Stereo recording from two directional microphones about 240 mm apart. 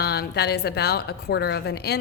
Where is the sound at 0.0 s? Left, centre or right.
Left.